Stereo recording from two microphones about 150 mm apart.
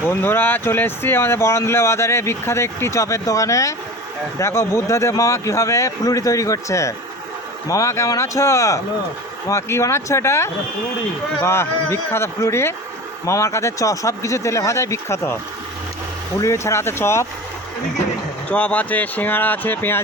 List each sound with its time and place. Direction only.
0.1 s speech: 15° left (ahead or behind)
16.4 s speech: 20° left (ahead or behind)
18.5 s speech: 10° left (ahead or behind)